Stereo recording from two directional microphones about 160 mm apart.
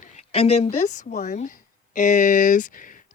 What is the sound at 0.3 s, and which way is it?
A woman's voice, 40° left (ahead or behind).